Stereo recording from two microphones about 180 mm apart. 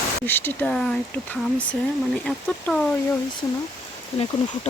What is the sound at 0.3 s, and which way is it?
Speech, 10° left (ahead or behind).